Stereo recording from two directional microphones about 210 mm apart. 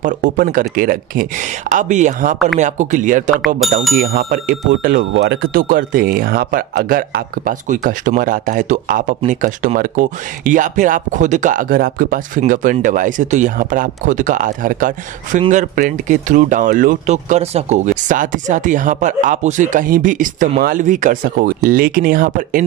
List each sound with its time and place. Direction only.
0.0 s speech: 40° right (ahead or behind)
3.3 s speech: centre (ahead or behind)
4.0 s speech: 45° right (ahead or behind)
5.1 s speech: 55° right (ahead or behind)